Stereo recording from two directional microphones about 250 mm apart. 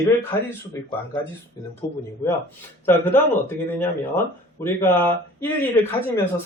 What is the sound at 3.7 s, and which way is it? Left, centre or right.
Speech, centre.